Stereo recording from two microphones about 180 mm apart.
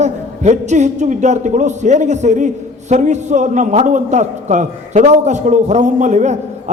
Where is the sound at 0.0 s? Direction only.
40° right (ahead or behind).